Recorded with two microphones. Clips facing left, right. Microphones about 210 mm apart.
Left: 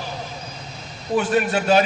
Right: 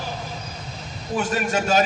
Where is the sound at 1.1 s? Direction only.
40° right (ahead or behind).